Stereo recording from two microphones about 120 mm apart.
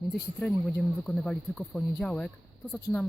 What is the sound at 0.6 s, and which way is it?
Speech, centre (ahead or behind).